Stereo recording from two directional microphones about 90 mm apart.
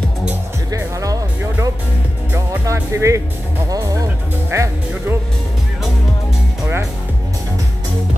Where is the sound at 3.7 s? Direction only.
45° right (ahead or behind).